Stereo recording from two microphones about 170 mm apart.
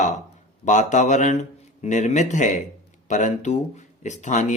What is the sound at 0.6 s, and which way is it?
Speech, 45° left (ahead or behind).